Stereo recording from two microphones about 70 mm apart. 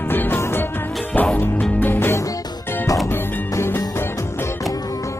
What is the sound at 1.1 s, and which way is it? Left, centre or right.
Music, left.